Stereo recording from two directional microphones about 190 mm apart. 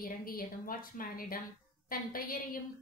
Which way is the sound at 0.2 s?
50° left (ahead or behind).